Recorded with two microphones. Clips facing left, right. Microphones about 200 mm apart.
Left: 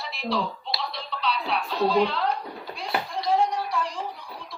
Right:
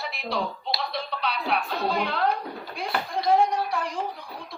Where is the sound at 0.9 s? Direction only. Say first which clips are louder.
Even; 55° right (ahead or behind).